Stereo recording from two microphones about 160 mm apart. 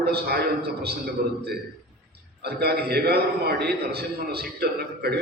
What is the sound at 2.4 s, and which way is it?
A man's voice, 80° right.